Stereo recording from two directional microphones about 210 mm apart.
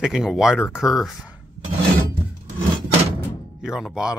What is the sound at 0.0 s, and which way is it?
Speech, centre (ahead or behind).